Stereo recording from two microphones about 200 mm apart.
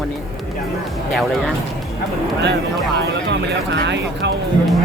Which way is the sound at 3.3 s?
60° right (ahead or behind).